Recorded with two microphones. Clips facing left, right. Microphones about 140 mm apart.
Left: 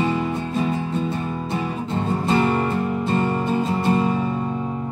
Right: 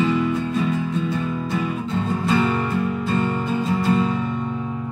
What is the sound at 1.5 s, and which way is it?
Music, 30° left (ahead or behind).